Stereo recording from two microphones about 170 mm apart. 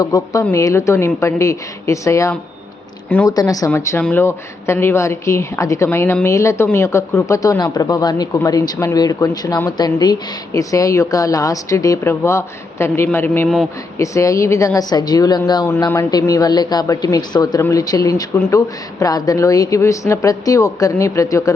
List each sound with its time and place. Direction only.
0.0 s a woman's voice: 20° left (ahead or behind)